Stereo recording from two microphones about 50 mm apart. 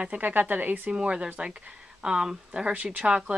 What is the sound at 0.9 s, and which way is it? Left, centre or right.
Speech, right.